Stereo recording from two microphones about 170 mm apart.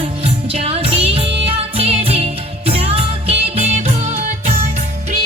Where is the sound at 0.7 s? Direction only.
35° right (ahead or behind).